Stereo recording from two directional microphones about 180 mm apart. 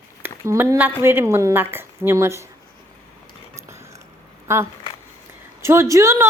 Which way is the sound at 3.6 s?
15° right (ahead or behind).